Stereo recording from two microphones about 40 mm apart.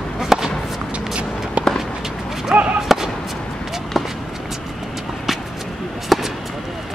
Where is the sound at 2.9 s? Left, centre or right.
Centre.